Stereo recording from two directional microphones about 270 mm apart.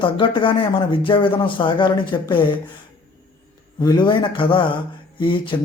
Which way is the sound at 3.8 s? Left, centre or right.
Centre.